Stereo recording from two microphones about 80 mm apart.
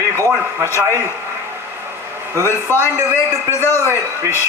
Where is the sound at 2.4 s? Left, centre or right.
Left.